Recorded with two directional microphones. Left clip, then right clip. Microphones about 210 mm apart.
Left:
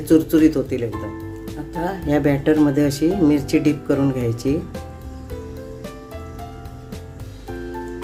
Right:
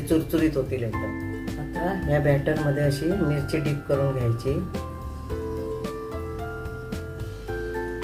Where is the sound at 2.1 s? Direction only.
55° left (ahead or behind).